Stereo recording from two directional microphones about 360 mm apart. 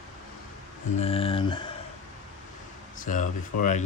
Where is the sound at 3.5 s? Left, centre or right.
Left.